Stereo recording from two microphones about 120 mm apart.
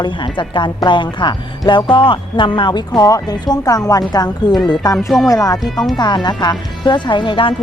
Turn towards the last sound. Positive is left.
turn(degrees=45)  # may be behind; listen again after turning